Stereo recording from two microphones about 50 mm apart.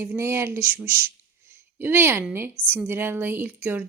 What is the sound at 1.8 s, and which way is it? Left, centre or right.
A woman's voice, right.